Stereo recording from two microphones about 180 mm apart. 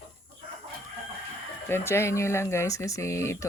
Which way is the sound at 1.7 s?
15° left (ahead or behind).